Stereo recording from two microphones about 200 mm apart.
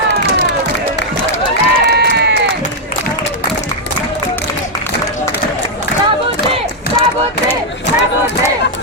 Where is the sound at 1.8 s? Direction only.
55° right (ahead or behind).